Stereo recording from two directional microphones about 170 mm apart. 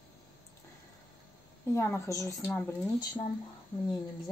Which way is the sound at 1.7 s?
15° left (ahead or behind).